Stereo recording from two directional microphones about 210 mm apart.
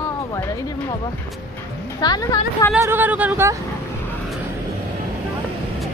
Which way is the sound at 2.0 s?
20° left (ahead or behind).